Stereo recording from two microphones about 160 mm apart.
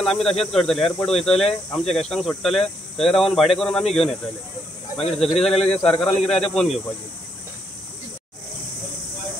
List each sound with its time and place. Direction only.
0.0 s speech: centre (ahead or behind)
5.6 s speech: 40° left (ahead or behind)
6.2 s speech: 5° left (ahead or behind)